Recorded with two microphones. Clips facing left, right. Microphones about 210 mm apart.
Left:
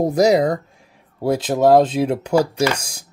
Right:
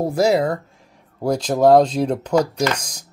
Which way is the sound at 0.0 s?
20° left (ahead or behind).